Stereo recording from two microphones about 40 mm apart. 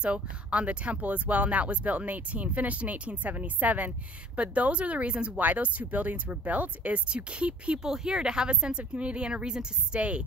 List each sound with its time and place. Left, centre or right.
0.0 s speech: right
5.4 s speech: right
7.8 s speech: centre
9.9 s speech: right